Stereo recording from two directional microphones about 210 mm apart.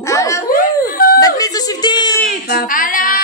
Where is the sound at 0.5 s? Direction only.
45° left (ahead or behind).